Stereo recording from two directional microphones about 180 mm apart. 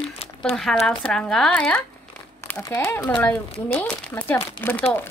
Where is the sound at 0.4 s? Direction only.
5° left (ahead or behind).